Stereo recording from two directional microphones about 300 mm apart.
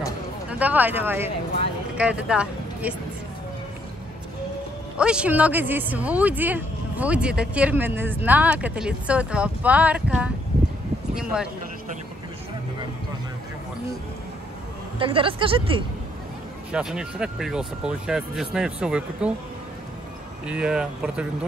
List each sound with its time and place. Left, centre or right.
0.5 s speech: centre
4.9 s speech: centre
11.3 s speech: centre
15.0 s speech: centre
16.7 s speech: centre
20.4 s speech: centre